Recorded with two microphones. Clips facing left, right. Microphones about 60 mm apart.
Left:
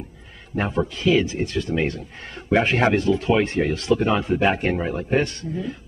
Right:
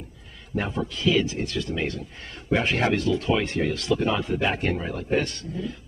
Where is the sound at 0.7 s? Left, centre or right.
Left.